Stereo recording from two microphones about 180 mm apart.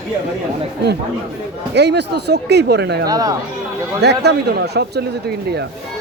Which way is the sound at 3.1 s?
20° right (ahead or behind).